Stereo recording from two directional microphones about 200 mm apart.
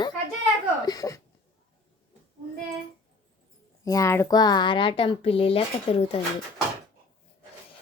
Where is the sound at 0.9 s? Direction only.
15° left (ahead or behind).